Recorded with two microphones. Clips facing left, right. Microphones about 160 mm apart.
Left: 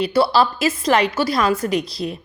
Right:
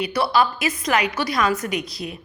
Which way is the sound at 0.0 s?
30° left (ahead or behind).